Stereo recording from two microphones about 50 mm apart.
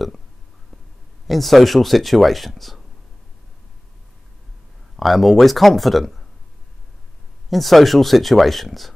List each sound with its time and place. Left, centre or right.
1.2 s speech: centre
4.9 s speech: centre
7.4 s speech: centre